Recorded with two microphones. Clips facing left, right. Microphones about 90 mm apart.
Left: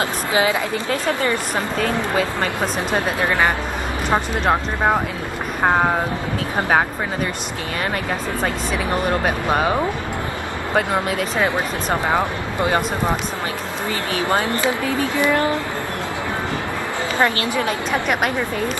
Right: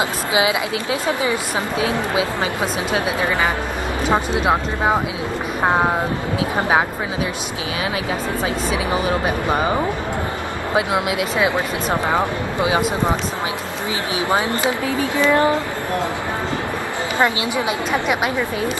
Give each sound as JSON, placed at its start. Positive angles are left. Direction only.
{"t": 0.3, "sound": "speech", "side_deg": -15}
{"t": 2.9, "sound": "speech", "side_deg": 65}
{"t": 4.1, "sound": "speech", "side_deg": -5}
{"t": 9.5, "sound": "speech", "side_deg": 0}
{"t": 14.1, "sound": "speech", "side_deg": -15}
{"t": 17.2, "sound": "speech", "side_deg": -15}